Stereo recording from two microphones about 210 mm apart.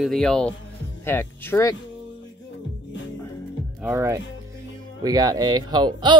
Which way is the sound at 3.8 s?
15° right (ahead or behind).